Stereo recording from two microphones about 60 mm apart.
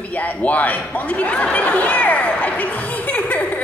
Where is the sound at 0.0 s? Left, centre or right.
Left.